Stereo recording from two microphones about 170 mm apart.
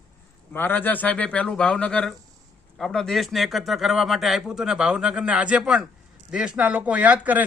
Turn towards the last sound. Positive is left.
turn(degrees=-10)  # may be behind; listen again after turning